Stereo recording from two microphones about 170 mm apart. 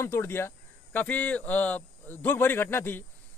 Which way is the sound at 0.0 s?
15° left (ahead or behind).